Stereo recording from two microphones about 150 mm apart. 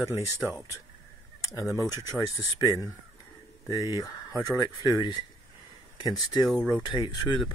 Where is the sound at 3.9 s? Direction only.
25° left (ahead or behind).